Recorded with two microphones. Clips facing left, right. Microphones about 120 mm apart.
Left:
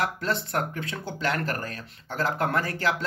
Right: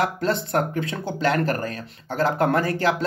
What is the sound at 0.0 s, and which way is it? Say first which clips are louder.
Speech: right 5 dB; 25° right (ahead or behind).